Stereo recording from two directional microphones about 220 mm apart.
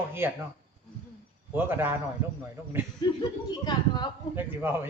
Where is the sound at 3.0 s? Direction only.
20° left (ahead or behind).